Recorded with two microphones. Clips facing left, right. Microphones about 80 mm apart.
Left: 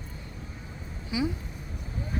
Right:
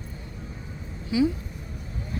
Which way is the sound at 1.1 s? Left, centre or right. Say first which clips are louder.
Right 7 dB; centre.